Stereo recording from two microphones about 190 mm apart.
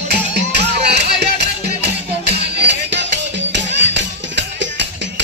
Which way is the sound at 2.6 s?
65° right (ahead or behind).